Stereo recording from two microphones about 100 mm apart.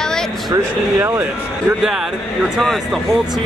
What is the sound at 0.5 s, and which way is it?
Speech, 25° right (ahead or behind).